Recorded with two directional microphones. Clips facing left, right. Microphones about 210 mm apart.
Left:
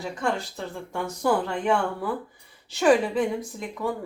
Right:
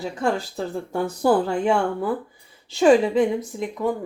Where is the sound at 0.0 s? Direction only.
35° right (ahead or behind).